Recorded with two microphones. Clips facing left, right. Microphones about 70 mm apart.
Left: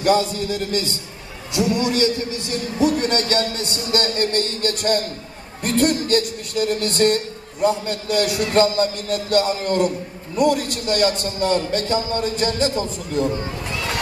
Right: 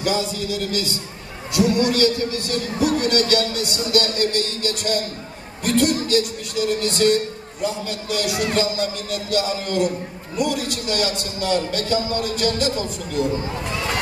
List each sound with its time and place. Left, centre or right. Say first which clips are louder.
0.0 s a man's voice: left 5 dB; left
1.5 s a man's voice: right 2 dB; left